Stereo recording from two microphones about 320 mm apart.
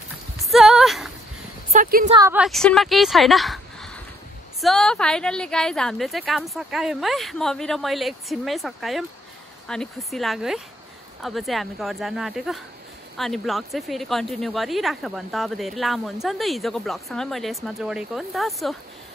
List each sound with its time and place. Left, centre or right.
0.5 s a sound: centre
1.7 s speech: right
2.1 s speech: centre